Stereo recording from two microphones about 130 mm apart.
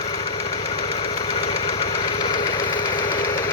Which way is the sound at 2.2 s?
30° left (ahead or behind).